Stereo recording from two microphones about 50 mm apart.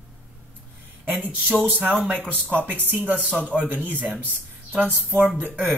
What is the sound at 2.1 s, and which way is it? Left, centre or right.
Speech, right.